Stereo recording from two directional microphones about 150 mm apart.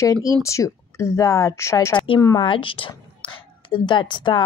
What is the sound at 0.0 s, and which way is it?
A woman's voice, 20° left (ahead or behind).